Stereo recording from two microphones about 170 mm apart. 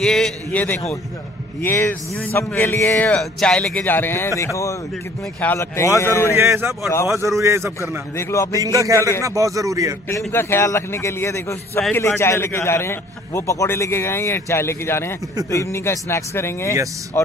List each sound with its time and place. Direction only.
0.0 s a man's voice: 5° left (ahead or behind)
6.3 s a man's voice: 15° right (ahead or behind)
8.2 s a man's voice: 20° left (ahead or behind)
8.5 s speech: 20° right (ahead or behind)
10.0 s a man's voice: 15° left (ahead or behind)